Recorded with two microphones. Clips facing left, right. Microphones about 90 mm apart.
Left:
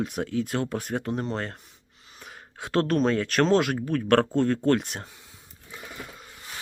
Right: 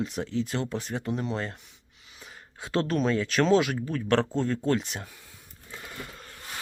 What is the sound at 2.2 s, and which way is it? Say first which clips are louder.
Speech: left 3 dB; 60° left (ahead or behind).